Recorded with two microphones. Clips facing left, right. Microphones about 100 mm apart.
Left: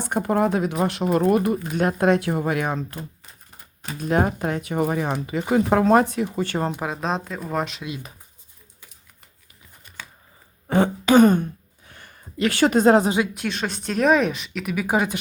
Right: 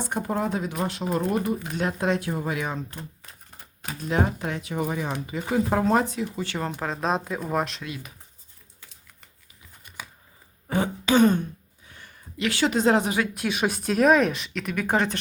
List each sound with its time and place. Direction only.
0.0 s speech: 65° left (ahead or behind)
1.7 s speech: 55° left (ahead or behind)
4.1 s speech: 45° left (ahead or behind)
5.2 s speech: 70° left (ahead or behind); by 6.6 s 50° left (ahead or behind)
6.7 s speech: 10° left (ahead or behind)
7.8 s speech: 20° left (ahead or behind)
10.7 s throat clearing: 55° left (ahead or behind)
11.9 s a sound: 55° left (ahead or behind)
13.3 s speech: 5° right (ahead or behind); by 15.2 s 10° left (ahead or behind)